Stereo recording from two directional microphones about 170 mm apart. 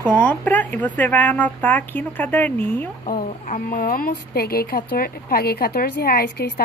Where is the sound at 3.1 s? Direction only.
55° left (ahead or behind); by 6.5 s 70° left (ahead or behind).